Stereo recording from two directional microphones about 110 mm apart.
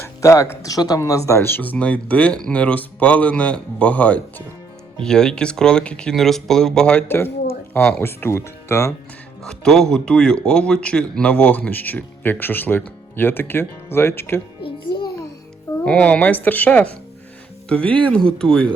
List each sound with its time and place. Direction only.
0.2 s a man's voice: 30° left (ahead or behind); by 7.0 s 5° left (ahead or behind)
7.7 s speech: 20° left (ahead or behind)
9.4 s a man's voice: 5° left (ahead or behind); by 14.4 s 20° left (ahead or behind)
14.6 s music: 45° left (ahead or behind)
15.8 s a man's voice: 10° left (ahead or behind)